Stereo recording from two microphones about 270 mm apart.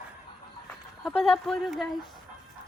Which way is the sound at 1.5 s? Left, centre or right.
Centre.